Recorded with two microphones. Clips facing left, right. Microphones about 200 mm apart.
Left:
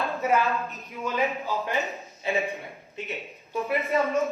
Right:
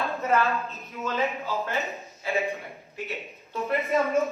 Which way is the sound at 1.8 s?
Centre (ahead or behind).